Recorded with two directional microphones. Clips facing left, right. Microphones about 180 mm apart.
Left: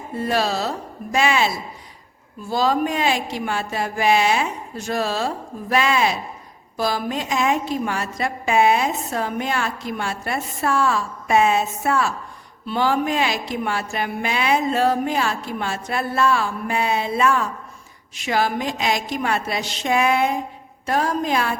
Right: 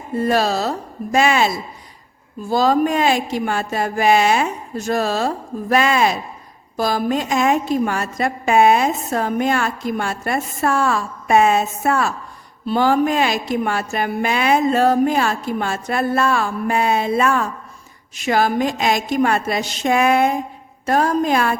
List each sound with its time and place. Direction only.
0.2 s a woman's voice: 45° right (ahead or behind)